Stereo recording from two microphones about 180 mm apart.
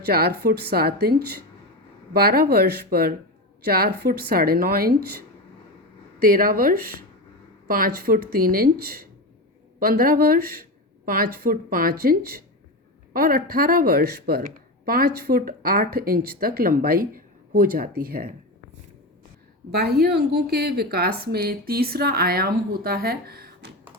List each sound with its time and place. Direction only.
0.0 s speech: 60° right (ahead or behind)
6.1 s speech: 55° right (ahead or behind)
19.7 s speech: 60° right (ahead or behind)